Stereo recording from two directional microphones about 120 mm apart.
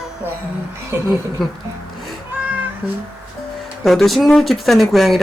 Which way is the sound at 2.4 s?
15° right (ahead or behind).